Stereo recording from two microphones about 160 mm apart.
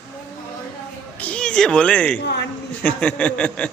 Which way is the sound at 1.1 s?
10° left (ahead or behind).